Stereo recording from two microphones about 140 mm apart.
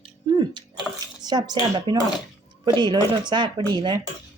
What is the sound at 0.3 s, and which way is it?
Bathtub, 35° right (ahead or behind).